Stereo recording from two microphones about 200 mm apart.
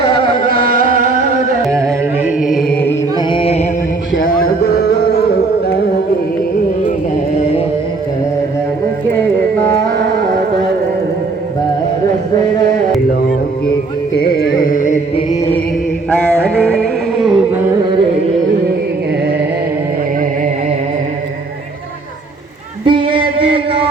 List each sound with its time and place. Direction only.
0.0 s carnatic music: 55° right (ahead or behind)
1.7 s carnatic music: 15° right (ahead or behind)
2.4 s chant: centre (ahead or behind)
2.8 s chant: 20° left (ahead or behind)
4.2 s music: 45° left (ahead or behind)
14.2 s carnatic music: 50° left (ahead or behind)
15.1 s chant: 25° left (ahead or behind)
16.6 s music: 5° left (ahead or behind)
22.9 s a sound: 25° right (ahead or behind)